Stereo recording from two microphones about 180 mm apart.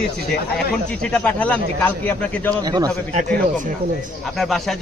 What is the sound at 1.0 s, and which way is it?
Speech, 5° left (ahead or behind).